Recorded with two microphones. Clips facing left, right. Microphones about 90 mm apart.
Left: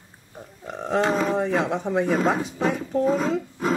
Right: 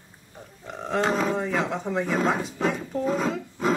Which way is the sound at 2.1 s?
5° left (ahead or behind).